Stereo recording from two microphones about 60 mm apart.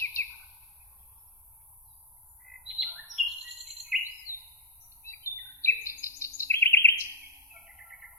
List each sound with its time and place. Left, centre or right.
0.0 s bird: left
2.4 s bird: centre
3.1 s bird vocalization: centre
3.9 s bird: centre
4.3 s bird: left
5.6 s bird vocalization: left
7.5 s bird: centre